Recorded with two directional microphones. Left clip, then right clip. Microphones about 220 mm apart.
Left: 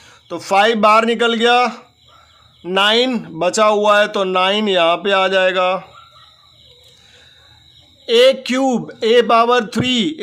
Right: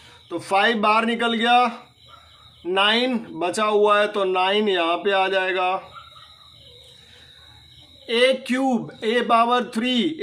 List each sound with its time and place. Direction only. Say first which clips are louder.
0.3 s speech: left 6 dB; 45° left (ahead or behind)
8.0 s speech: left 7 dB; 50° left (ahead or behind)